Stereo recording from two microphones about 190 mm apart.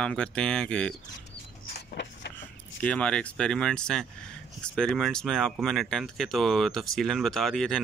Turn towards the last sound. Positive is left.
turn(degrees=5)  # may be behind; listen again after turning